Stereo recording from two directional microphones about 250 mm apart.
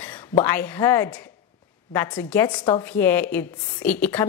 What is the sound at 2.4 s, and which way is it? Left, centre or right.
Speech, centre.